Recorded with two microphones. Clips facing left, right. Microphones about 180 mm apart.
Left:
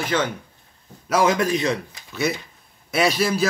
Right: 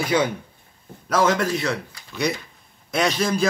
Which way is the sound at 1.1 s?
15° left (ahead or behind).